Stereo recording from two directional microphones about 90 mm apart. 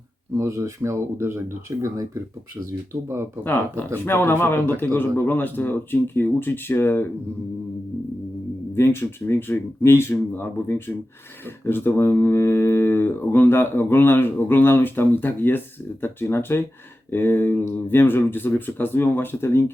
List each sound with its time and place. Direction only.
0.3 s speech: 35° right (ahead or behind)
3.4 s speech: 20° left (ahead or behind)
8.7 s speech: 30° left (ahead or behind)